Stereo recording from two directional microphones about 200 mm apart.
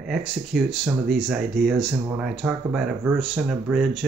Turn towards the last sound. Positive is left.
turn(degrees=0)  # may be behind; listen again after turning